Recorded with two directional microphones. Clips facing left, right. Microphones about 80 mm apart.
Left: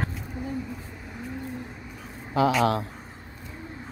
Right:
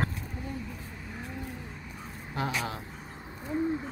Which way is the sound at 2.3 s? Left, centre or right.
Left.